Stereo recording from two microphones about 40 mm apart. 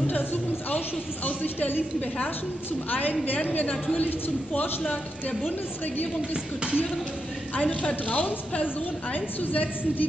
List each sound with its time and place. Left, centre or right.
0.0 s a sound: left
2.0 s a woman's voice: left
2.9 s a woman's voice: left
6.3 s speech: right
7.5 s a woman's voice: left